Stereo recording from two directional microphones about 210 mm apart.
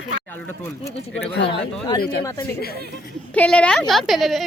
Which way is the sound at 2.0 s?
45° left (ahead or behind).